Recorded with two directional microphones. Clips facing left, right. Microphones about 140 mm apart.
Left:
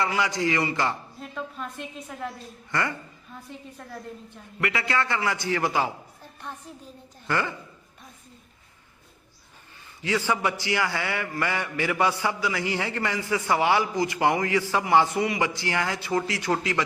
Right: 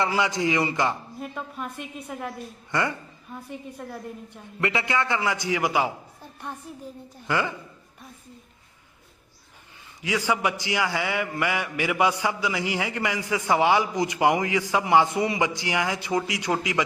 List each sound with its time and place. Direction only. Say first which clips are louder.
0.0 s a man's voice: right 1 dB; 20° right (ahead or behind)
3.8 s a man's voice: right 5 dB; 5° right (ahead or behind)
4.6 s a man's voice: right 1 dB; 25° right (ahead or behind)
7.3 s a man's voice: right 1 dB; 15° right (ahead or behind)
10.0 s a man's voice: even; 10° right (ahead or behind)